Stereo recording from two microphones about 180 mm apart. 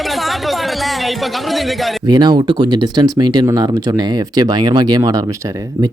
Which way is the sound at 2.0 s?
25° right (ahead or behind).